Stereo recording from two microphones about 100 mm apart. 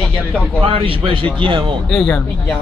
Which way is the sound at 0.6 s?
65° right (ahead or behind).